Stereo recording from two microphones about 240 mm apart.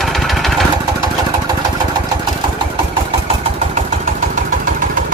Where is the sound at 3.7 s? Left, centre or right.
Right.